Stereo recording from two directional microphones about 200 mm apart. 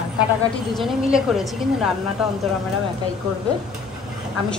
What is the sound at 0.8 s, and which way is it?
A woman's voice, centre (ahead or behind).